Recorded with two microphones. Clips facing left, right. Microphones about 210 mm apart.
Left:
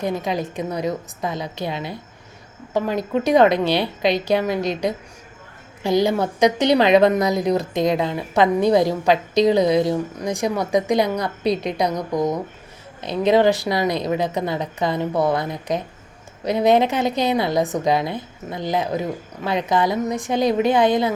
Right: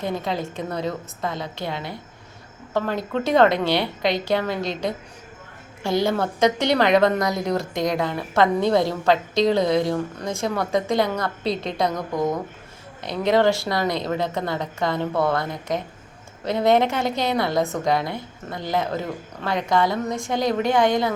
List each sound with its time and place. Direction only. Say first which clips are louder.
0.0 s a woman's voice: left 3 dB; 15° left (ahead or behind)
5.8 s a woman's voice: left 3 dB; 20° left (ahead or behind)
13.2 s a woman's voice: left 3 dB; 20° left (ahead or behind)